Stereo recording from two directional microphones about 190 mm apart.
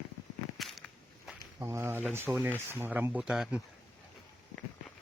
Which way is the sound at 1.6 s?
15° right (ahead or behind).